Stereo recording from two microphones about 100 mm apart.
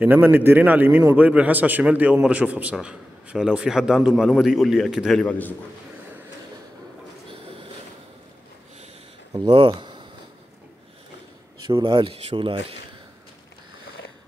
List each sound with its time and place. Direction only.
0.0 s a man's voice: 20° right (ahead or behind); by 5.2 s centre (ahead or behind)
5.2 s a man's voice: 20° left (ahead or behind)
9.7 s a sound: 50° right (ahead or behind)
11.8 s speech: 55° right (ahead or behind)